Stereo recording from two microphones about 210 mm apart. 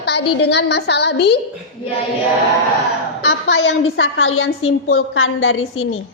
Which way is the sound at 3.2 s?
70° left (ahead or behind).